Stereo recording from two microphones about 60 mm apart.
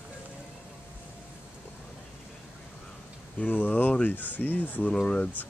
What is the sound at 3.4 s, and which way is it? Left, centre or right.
Speech, left.